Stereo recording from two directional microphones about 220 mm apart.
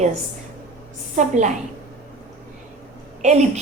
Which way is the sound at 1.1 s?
35° right (ahead or behind).